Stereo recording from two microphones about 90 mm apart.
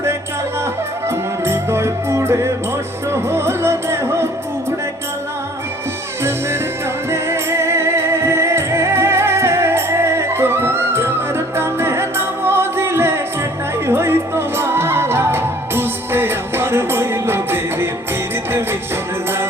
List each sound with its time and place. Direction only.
1.0 s music: 30° right (ahead or behind)
7.1 s music: 30° right (ahead or behind)